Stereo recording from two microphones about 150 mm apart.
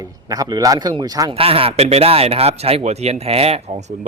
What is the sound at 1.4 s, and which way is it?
Speech, 40° right (ahead or behind).